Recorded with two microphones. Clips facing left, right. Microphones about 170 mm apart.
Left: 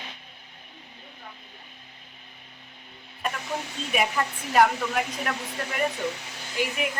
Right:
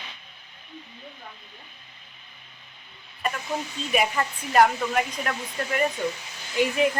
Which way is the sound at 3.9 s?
Centre (ahead or behind).